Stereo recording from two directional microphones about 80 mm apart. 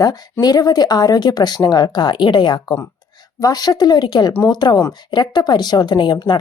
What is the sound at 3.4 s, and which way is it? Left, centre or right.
Speech, left.